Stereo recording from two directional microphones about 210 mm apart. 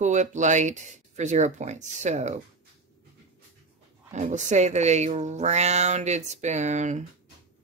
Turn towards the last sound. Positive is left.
turn(degrees=-35)  # may be behind; listen again after turning